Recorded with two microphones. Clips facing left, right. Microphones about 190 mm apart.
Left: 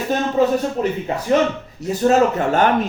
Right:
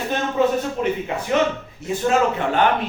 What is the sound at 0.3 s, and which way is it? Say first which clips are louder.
A man's voice: left 2 dB; 40° left (ahead or behind).